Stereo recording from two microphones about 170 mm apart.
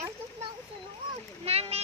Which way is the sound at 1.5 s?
35° right (ahead or behind).